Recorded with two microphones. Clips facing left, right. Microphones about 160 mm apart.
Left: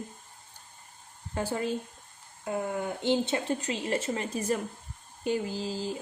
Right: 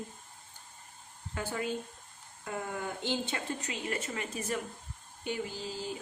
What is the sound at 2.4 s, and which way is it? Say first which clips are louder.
Speech: left 6 dB; 25° left (ahead or behind).